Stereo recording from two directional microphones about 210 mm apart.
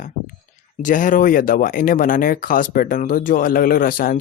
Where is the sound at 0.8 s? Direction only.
40° left (ahead or behind).